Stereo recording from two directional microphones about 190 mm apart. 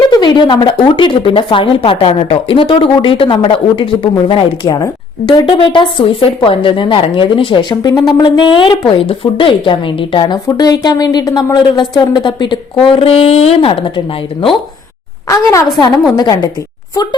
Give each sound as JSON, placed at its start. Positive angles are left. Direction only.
{"t": 0.1, "sound": "speech", "side_deg": 25}
{"t": 16.1, "sound": "speech", "side_deg": 20}